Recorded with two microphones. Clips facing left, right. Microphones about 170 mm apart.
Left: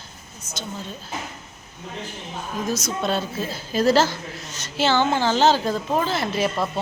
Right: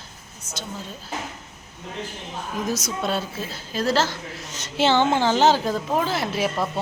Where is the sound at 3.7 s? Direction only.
5° left (ahead or behind).